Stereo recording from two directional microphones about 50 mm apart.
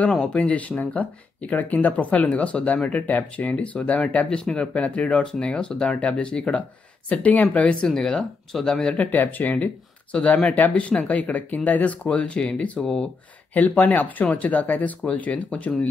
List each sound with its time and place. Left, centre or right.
0.2 s speech: left
4.3 s speech: centre
7.8 s speech: centre
8.9 s speech: left
12.8 s speech: centre
13.5 s speech: left